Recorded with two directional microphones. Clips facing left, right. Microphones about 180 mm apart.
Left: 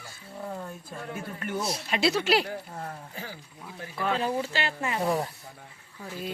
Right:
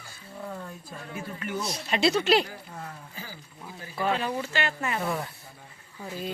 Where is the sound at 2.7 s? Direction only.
40° left (ahead or behind).